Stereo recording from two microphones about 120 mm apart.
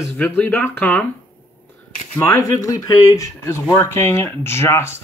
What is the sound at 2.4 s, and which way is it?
Speech, 30° left (ahead or behind).